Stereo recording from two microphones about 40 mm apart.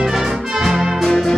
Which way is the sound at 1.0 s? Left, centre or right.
Centre.